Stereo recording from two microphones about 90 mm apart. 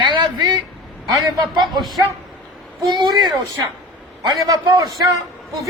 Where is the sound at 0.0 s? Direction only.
65° right (ahead or behind).